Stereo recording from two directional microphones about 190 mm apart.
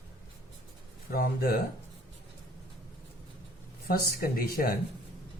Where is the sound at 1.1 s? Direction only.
50° left (ahead or behind).